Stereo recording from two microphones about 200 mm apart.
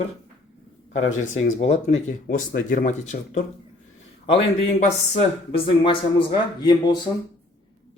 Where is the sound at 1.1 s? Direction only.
35° left (ahead or behind).